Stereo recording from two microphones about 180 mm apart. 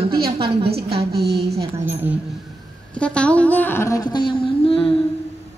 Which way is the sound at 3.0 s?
5° left (ahead or behind).